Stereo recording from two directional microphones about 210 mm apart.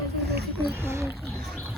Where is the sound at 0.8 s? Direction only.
10° right (ahead or behind).